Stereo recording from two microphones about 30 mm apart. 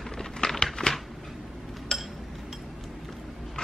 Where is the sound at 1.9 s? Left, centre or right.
Centre.